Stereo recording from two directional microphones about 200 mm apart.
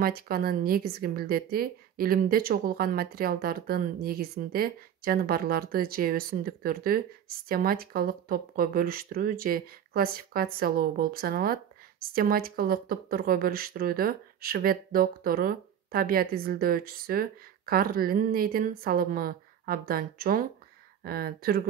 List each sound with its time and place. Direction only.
0.0 s speech: 50° right (ahead or behind)